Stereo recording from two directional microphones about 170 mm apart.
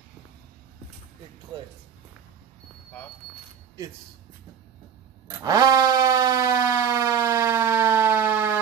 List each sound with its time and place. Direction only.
5.4 s siren: 20° right (ahead or behind)